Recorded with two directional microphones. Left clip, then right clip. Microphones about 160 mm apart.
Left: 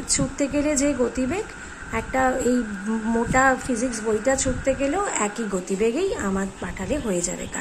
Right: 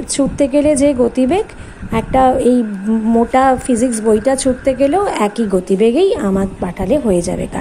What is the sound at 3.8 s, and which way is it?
Speech, 90° right.